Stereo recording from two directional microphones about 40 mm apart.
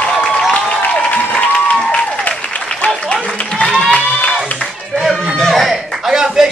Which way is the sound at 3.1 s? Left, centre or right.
Left.